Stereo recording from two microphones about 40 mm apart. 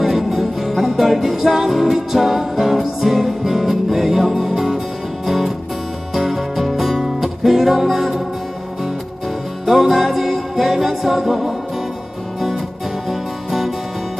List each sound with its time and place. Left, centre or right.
0.0 s music: centre
9.6 s music: centre
13.1 s music: centre